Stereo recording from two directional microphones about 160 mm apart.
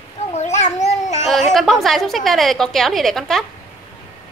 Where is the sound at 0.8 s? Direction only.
45° left (ahead or behind).